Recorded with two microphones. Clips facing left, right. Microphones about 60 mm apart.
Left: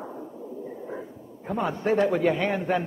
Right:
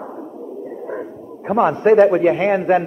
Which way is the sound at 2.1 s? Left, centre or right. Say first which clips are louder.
Right 8 dB; right.